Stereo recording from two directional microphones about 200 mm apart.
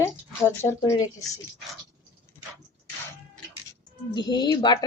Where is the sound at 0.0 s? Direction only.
10° left (ahead or behind).